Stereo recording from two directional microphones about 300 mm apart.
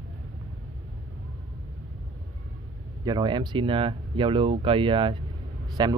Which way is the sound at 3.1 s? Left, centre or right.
Centre.